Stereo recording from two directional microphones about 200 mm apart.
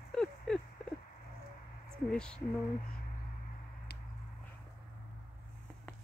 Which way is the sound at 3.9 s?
55° left (ahead or behind).